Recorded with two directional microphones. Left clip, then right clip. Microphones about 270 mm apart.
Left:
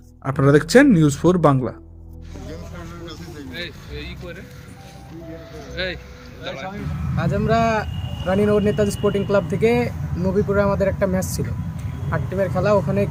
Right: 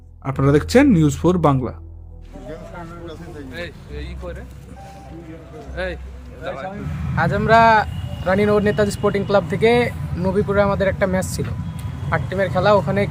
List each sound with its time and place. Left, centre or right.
0.3 s speech: centre
5.7 s speech: centre